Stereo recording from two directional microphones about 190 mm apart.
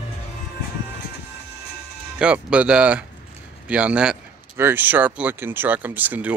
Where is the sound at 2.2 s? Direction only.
5° right (ahead or behind).